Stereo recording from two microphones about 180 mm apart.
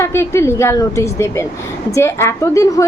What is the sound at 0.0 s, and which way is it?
A woman's voice, 15° left (ahead or behind).